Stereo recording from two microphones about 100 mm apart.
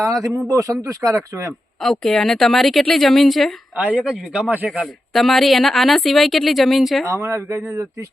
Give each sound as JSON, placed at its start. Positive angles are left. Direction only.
{"t": 0.0, "sound": "speech", "side_deg": -35}
{"t": 1.8, "sound": "speech", "side_deg": 5}
{"t": 3.8, "sound": "speech", "side_deg": -15}
{"t": 5.1, "sound": "speech", "side_deg": 0}
{"t": 7.1, "sound": "speech", "side_deg": -30}